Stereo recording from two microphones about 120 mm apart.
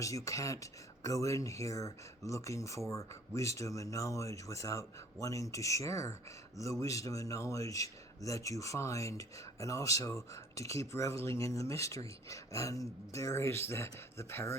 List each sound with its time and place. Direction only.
0.0 s speech: 25° left (ahead or behind)